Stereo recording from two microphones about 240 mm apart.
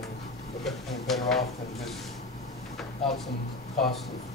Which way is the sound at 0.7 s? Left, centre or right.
Centre.